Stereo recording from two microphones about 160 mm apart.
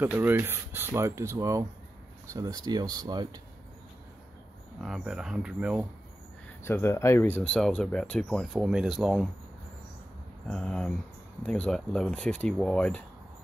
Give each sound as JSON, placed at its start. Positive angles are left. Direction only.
{"t": 0.0, "sound": "speech", "side_deg": -10}
{"t": 4.7, "sound": "speech", "side_deg": -5}
{"t": 6.6, "sound": "speech", "side_deg": 15}
{"t": 10.5, "sound": "speech", "side_deg": 5}